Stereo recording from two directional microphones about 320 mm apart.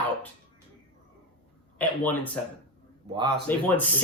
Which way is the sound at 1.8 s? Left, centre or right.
Centre.